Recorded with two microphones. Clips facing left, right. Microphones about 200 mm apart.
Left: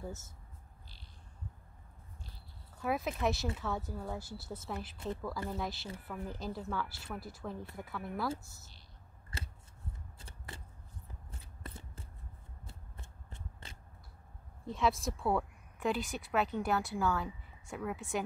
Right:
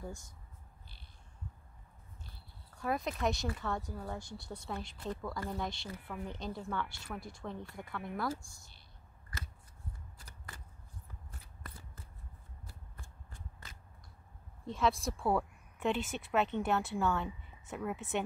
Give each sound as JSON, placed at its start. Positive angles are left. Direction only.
{"t": 0.0, "sound": "speech", "side_deg": 5}
{"t": 2.7, "sound": "speech", "side_deg": 5}
{"t": 4.9, "sound": "speech", "side_deg": 25}
{"t": 5.5, "sound": "speech", "side_deg": 5}
{"t": 9.3, "sound": "scissors", "side_deg": 25}
{"t": 10.1, "sound": "shuffling cards", "side_deg": 25}
{"t": 11.3, "sound": "a sound", "side_deg": 25}
{"t": 12.6, "sound": "shuffling cards", "side_deg": 25}
{"t": 14.7, "sound": "speech", "side_deg": 0}